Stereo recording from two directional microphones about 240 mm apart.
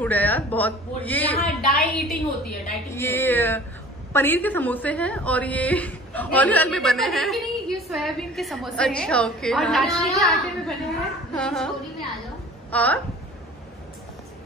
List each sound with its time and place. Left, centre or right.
0.0 s a woman's voice: centre
12.7 s a woman's voice: centre